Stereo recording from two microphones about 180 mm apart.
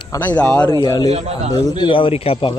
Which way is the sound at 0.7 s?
20° left (ahead or behind).